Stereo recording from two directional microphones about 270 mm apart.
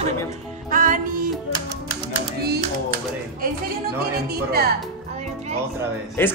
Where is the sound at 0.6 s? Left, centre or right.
Right.